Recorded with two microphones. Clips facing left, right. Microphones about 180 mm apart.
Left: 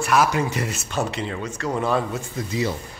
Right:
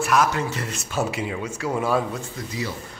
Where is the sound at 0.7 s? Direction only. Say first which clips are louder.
Even; 5° right (ahead or behind).